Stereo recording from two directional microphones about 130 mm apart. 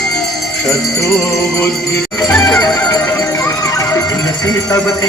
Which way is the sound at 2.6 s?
10° left (ahead or behind).